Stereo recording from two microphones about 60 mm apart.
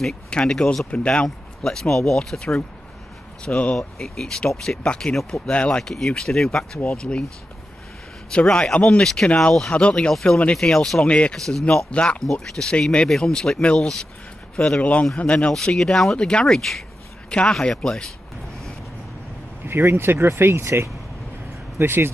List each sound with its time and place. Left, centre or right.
0.3 s speech: centre
8.3 s speech: centre
11.3 s speech: centre
11.9 s speech: centre
12.3 s speech: centre
15.5 s speech: centre
19.6 s speech: right